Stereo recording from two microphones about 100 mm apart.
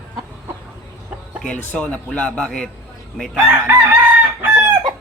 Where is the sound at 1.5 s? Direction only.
10° left (ahead or behind).